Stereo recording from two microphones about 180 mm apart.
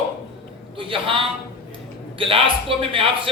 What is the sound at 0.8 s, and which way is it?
A man's voice, 30° right (ahead or behind).